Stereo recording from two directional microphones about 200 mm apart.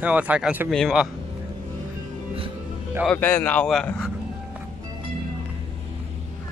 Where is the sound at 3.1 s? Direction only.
10° left (ahead or behind).